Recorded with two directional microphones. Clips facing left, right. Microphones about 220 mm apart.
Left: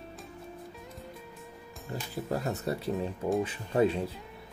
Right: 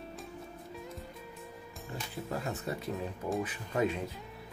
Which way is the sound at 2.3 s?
40° left (ahead or behind).